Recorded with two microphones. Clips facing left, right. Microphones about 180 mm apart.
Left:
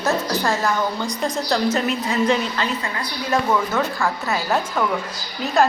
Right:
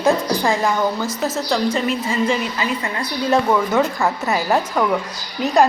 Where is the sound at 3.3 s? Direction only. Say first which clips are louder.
Right 3 dB; 20° right (ahead or behind).